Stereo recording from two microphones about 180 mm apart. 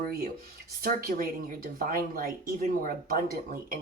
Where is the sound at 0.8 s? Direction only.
55° right (ahead or behind).